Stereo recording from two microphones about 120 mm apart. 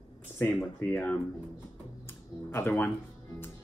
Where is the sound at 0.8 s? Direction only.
10° left (ahead or behind).